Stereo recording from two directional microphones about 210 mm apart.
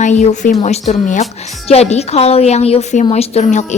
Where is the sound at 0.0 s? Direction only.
35° left (ahead or behind).